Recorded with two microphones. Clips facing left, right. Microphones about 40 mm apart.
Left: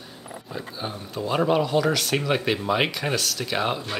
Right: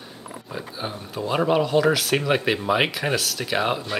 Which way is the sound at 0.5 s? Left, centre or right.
Centre.